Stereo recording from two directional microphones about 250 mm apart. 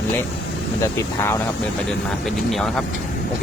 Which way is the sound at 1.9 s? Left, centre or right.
Centre.